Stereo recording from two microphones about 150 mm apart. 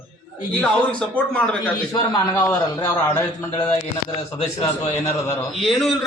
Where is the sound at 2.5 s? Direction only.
25° left (ahead or behind).